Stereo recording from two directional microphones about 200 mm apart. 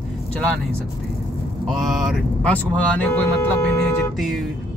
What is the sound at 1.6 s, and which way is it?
Speech, centre (ahead or behind).